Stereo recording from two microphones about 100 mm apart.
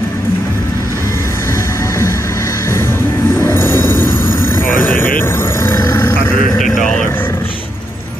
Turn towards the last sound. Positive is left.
turn(degrees=20)  # may be behind; listen again after turning